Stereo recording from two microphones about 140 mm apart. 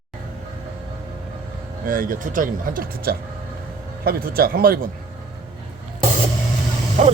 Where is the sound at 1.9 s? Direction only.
85° right.